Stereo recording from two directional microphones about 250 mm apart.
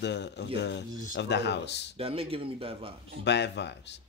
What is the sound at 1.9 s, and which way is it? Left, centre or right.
Speech, right.